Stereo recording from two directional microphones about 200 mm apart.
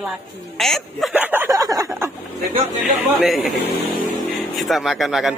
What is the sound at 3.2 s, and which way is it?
Speech, centre (ahead or behind).